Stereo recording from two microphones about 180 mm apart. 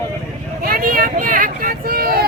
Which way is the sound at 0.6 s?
55° right (ahead or behind).